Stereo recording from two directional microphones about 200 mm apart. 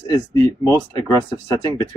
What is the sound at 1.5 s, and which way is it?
Speech, 20° left (ahead or behind).